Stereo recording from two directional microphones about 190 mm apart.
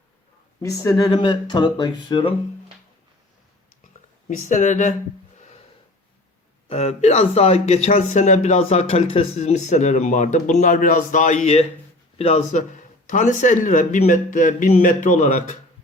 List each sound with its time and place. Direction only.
0.6 s speech: 15° left (ahead or behind)
4.3 s speech: 40° left (ahead or behind)
6.7 s speech: 35° left (ahead or behind)